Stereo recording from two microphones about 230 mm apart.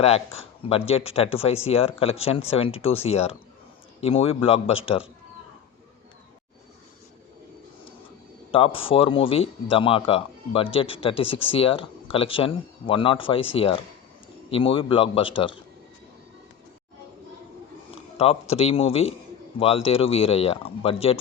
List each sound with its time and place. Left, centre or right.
0.3 s speech: left
8.5 s speech: left
18.2 s speech: left